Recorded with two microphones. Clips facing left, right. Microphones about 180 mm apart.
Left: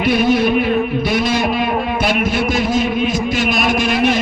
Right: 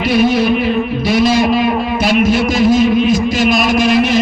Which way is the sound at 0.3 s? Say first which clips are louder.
Right 1 dB; 50° left (ahead or behind).